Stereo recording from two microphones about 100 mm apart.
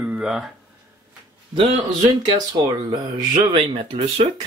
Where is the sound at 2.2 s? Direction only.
45° right (ahead or behind).